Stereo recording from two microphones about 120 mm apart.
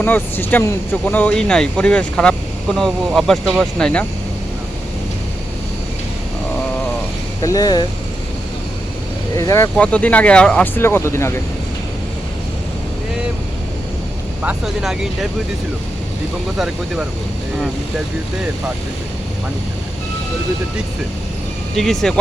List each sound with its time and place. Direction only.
0.0 s speech: 15° left (ahead or behind)
7.4 s speech: 30° left (ahead or behind)
9.3 s speech: 30° left (ahead or behind)
9.7 s speech: 10° left (ahead or behind)
10.8 s speech: 20° left (ahead or behind)
14.4 s speech: 5° right (ahead or behind)
16.6 s speech: 5° right (ahead or behind)
21.8 s speech: 5° left (ahead or behind)